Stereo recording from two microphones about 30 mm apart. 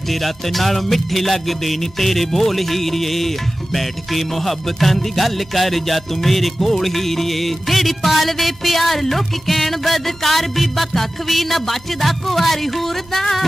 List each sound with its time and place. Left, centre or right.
0.1 s music: centre